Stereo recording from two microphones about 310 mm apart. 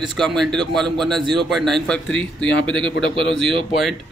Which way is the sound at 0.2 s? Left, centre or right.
Centre.